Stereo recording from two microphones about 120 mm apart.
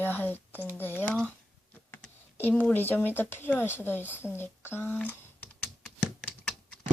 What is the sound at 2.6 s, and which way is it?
Speech, 15° left (ahead or behind).